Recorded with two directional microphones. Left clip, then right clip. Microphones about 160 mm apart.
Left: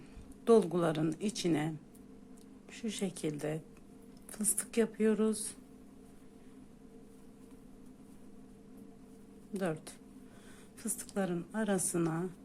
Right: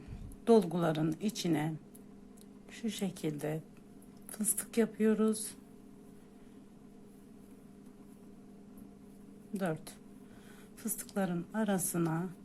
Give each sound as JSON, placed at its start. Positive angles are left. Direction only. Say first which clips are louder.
{"t": 0.4, "sound": "a woman's voice", "louder": "even", "side_deg": 0}
{"t": 2.7, "sound": "a woman's voice", "louder": "even", "side_deg": 0}
{"t": 9.6, "sound": "a woman's voice", "louder": "even", "side_deg": 0}